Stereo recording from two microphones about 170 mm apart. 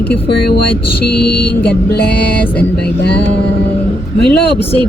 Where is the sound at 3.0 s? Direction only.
75° left (ahead or behind).